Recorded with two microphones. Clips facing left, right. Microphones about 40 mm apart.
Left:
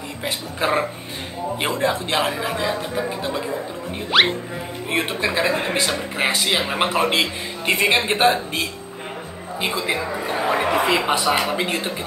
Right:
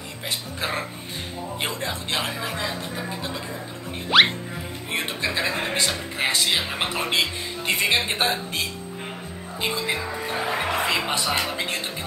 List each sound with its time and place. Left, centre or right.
0.2 s speech: centre
4.1 s music: centre
4.9 s speech: centre